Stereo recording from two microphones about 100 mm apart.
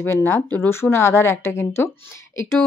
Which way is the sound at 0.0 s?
25° left (ahead or behind).